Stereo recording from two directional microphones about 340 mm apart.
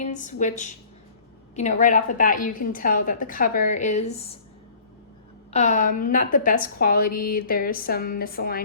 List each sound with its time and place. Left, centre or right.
0.0 s a woman's voice: left
5.5 s a woman's voice: centre